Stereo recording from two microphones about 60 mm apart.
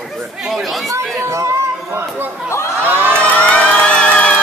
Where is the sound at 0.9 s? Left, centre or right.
Right.